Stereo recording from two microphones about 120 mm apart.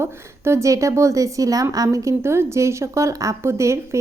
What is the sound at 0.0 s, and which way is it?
A woman's voice, 20° right (ahead or behind).